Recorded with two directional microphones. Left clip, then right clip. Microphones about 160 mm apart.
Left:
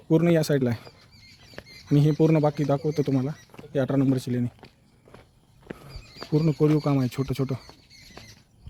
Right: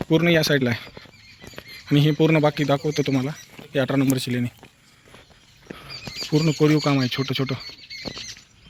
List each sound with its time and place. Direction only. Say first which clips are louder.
0.1 s speech: right 3 dB; 10° left (ahead or behind)
1.9 s speech: right 3 dB; 5° left (ahead or behind)
5.7 s wild animals: right 12 dB; centre (ahead or behind)
6.4 s speech: right 3 dB; centre (ahead or behind)
7.7 s squeal: right 13 dB; 70° left (ahead or behind)